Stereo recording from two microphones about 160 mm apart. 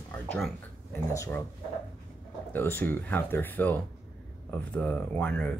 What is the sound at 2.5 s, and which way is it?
Speech, 15° left (ahead or behind).